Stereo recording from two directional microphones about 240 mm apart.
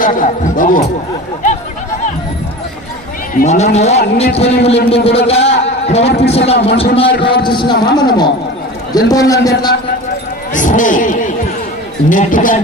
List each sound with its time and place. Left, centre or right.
0.0 s speech: left
3.3 s a man's voice: left
10.5 s speech: left